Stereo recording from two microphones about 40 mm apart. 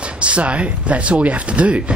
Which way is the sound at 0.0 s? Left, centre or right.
Right.